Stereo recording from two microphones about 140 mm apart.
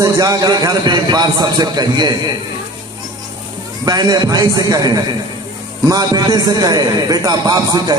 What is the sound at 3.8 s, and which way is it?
A man's voice, 30° right (ahead or behind).